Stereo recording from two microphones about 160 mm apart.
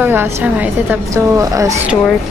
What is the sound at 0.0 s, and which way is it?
A woman's voice, 10° right (ahead or behind).